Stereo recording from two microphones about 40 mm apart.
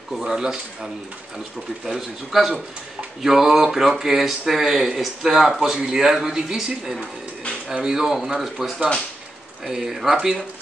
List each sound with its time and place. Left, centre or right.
0.2 s speech: centre
1.9 s speech: centre